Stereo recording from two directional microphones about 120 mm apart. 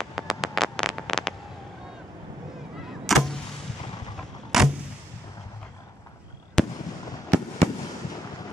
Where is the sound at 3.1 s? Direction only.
Centre (ahead or behind).